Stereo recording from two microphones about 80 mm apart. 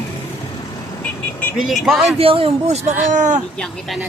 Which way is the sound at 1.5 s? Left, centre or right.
Centre.